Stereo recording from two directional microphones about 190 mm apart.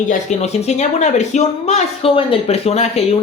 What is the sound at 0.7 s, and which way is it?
Speech, 35° left (ahead or behind).